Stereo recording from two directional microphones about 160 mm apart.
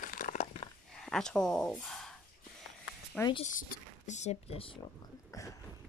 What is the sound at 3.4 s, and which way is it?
Speech, 55° left (ahead or behind).